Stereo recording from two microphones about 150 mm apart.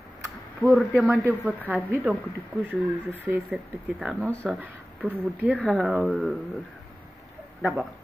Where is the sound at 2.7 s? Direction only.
10° right (ahead or behind).